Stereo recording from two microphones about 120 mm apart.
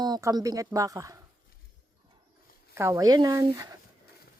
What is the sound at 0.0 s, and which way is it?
Speech, 30° right (ahead or behind).